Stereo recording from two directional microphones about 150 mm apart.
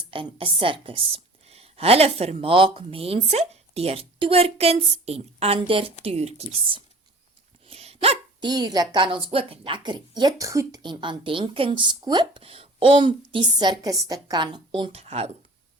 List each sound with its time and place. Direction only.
0.0 s a woman's voice: 35° right (ahead or behind)
7.7 s dog: 40° right (ahead or behind)
8.4 s a woman's voice: 25° right (ahead or behind); by 15.3 s 45° right (ahead or behind)